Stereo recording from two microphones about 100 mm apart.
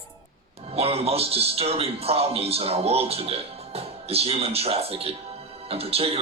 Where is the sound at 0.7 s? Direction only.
85° right.